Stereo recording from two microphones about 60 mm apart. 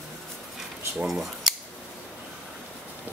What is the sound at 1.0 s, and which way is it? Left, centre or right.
Cutlery, centre.